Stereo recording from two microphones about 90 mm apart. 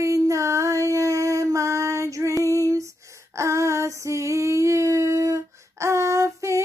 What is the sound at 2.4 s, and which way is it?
Female singing, 40° right (ahead or behind).